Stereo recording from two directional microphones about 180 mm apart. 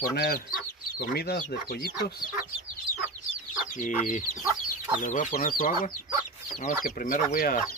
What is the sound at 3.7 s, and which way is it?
Speech, 45° left (ahead or behind).